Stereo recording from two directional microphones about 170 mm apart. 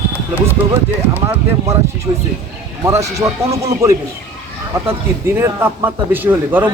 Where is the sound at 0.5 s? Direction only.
10° right (ahead or behind).